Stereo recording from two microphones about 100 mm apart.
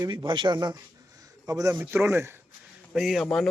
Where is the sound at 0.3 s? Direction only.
55° right (ahead or behind).